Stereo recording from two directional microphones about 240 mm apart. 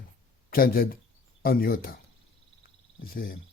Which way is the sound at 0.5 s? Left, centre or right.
Left.